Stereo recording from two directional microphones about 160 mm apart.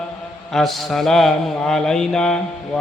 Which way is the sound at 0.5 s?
Centre (ahead or behind).